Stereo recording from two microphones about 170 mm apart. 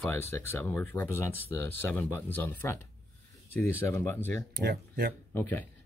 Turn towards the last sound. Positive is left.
turn(degrees=10)  # may be behind; listen again after turning